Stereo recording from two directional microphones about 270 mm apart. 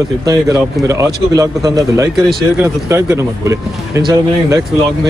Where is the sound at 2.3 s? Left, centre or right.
Centre.